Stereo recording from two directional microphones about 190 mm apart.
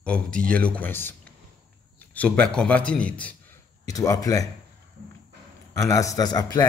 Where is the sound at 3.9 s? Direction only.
20° left (ahead or behind).